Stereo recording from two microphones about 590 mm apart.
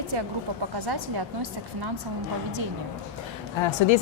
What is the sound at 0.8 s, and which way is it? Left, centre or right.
A woman's voice, right.